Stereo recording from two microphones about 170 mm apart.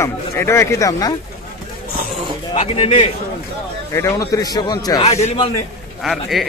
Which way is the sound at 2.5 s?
35° left (ahead or behind).